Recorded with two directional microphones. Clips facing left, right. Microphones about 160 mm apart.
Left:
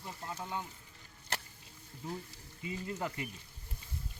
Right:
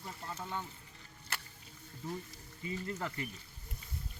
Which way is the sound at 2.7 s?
15° left (ahead or behind).